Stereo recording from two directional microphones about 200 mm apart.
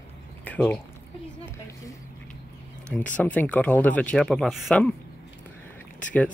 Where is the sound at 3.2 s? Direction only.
10° left (ahead or behind).